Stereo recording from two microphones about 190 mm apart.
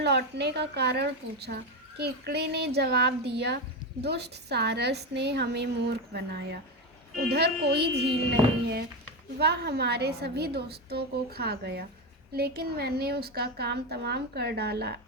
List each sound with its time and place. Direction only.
0.0 s a woman's voice: 60° right (ahead or behind)
9.4 s a woman's voice: 60° right (ahead or behind)